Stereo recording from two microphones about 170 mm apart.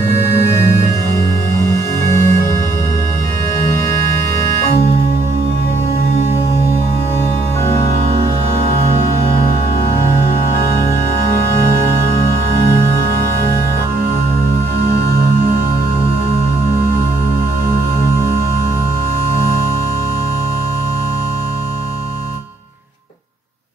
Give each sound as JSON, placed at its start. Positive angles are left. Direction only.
{"t": 1.7, "sound": "music", "side_deg": 15}
{"t": 3.6, "sound": "organ", "side_deg": 15}